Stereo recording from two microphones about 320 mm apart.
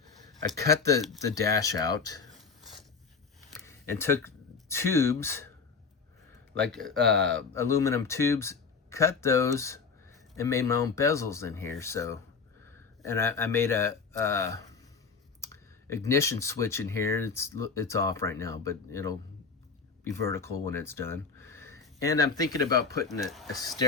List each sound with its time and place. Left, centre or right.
0.7 s speech: right
1.0 s speech: centre
2.3 s a sound: centre
3.7 s speech: centre
6.6 s speech: centre
7.0 s speech: right
7.5 s speech: centre
20.3 s speech: centre
23.3 s speech: centre